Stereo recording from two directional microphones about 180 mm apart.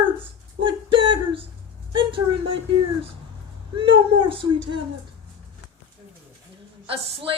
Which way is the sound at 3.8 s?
30° right (ahead or behind).